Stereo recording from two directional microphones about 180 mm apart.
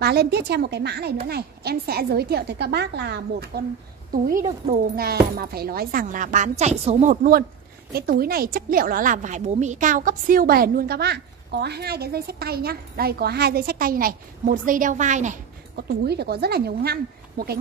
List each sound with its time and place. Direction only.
0.0 s a woman's voice: 60° right (ahead or behind)
4.1 s a woman's voice: 50° right (ahead or behind)
15.7 s a woman's voice: 65° right (ahead or behind)